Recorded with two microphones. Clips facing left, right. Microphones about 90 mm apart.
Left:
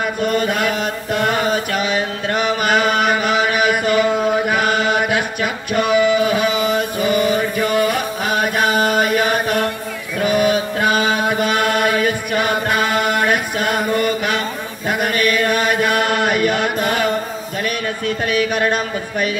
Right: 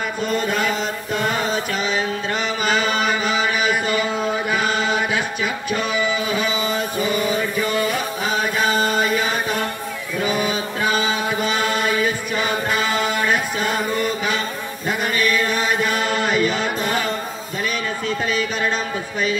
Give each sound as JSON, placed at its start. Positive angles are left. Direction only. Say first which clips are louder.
{"t": 0.2, "sound": "mantra", "louder": "left 3 dB", "side_deg": 60}
{"t": 10.2, "sound": "chant", "louder": "left 7 dB", "side_deg": 60}
{"t": 13.9, "sound": "mantra", "louder": "left 4 dB", "side_deg": 60}
{"t": 14.9, "sound": "chant", "louder": "left 3 dB", "side_deg": 60}
{"t": 17.6, "sound": "a sound", "louder": "left 2 dB", "side_deg": 60}